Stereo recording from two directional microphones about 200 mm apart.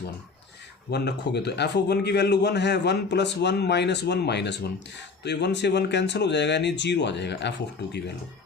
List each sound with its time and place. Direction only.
0.9 s a man's voice: 55° left (ahead or behind)